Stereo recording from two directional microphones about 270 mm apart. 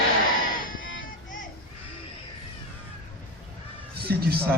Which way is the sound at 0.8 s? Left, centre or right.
Left.